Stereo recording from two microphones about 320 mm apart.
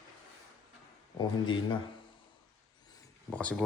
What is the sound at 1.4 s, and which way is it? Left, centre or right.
Speech, centre.